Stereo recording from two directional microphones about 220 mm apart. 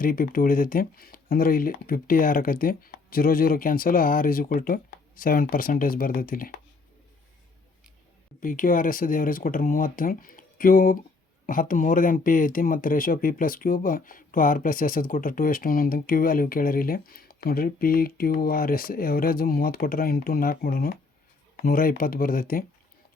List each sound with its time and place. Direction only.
0.0 s speech: 40° left (ahead or behind)
8.4 s speech: 40° left (ahead or behind)